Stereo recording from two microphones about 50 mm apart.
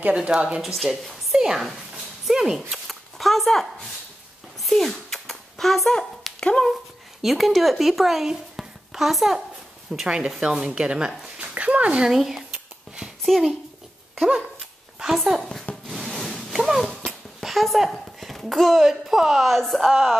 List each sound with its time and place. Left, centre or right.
0.0 s a woman's voice: right
0.6 s a woman's voice: centre
3.2 s a woman's voice: centre
4.6 s a sound: centre
6.4 s speech: centre
7.2 s speech: centre
10.0 s a woman's voice: right
11.3 s dog: right
12.1 s a woman's voice: centre
15.1 s speech: centre
15.9 s wood: centre
16.5 s a sound: centre
16.8 s a sound: centre
17.4 s a woman's voice: centre